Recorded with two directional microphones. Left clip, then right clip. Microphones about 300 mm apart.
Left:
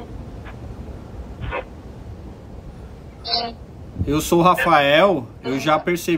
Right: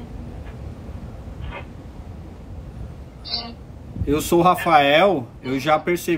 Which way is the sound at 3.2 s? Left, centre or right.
Left.